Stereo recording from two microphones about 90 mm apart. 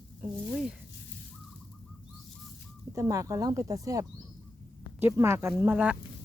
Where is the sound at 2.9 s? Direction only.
35° right (ahead or behind).